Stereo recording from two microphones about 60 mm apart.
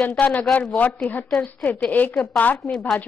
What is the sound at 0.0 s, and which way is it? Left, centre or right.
A woman's voice, left.